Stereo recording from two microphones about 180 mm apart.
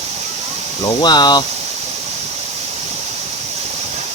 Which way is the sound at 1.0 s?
25° left (ahead or behind).